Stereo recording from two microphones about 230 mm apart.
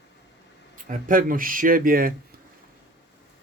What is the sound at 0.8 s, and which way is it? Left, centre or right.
Speech, right.